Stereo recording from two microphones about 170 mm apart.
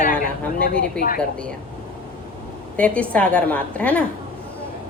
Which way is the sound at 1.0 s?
5° left (ahead or behind).